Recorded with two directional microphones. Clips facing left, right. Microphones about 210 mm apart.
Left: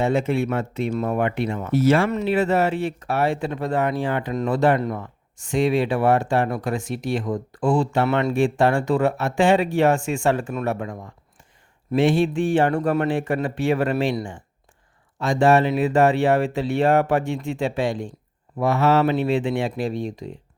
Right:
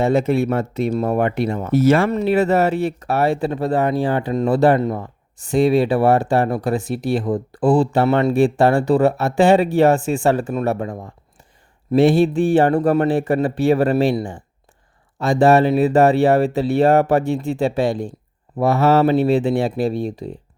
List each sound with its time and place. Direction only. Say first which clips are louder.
0.0 s speech: right 4 dB; 40° right (ahead or behind)